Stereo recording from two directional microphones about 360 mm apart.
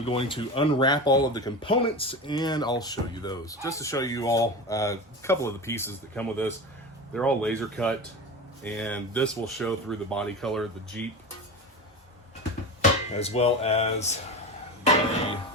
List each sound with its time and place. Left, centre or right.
0.0 s speech: centre
13.1 s speech: centre